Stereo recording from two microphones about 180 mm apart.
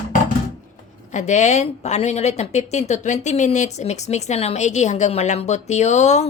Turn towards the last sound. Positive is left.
turn(degrees=40)  # may be behind; listen again after turning